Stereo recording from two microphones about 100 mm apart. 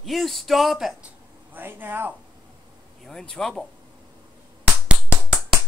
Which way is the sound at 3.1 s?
5° left (ahead or behind).